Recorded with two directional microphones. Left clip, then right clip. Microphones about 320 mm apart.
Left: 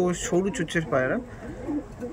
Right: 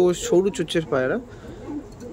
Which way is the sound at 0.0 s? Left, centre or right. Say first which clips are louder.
Right 6 dB; centre.